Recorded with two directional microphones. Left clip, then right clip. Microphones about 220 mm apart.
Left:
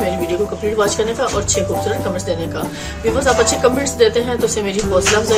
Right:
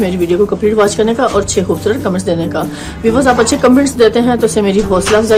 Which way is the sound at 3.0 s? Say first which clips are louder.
Right 4 dB; 45° right (ahead or behind).